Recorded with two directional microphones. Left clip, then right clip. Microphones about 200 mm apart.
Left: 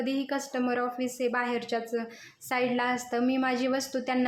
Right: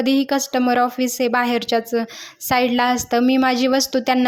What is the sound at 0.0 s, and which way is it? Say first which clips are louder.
A woman's voice: right 12 dB; 45° right (ahead or behind).